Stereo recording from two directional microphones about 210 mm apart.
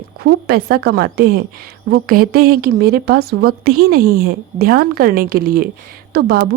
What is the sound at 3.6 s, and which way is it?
Speech, 90° right.